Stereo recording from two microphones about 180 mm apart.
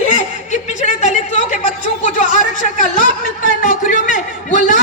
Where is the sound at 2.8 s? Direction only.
45° left (ahead or behind).